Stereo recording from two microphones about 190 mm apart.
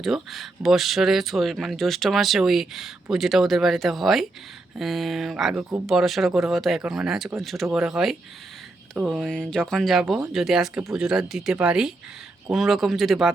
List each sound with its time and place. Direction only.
0.0 s speech: centre (ahead or behind)